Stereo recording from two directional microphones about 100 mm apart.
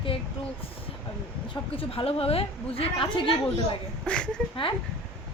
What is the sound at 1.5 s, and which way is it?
A woman's voice, 65° left (ahead or behind).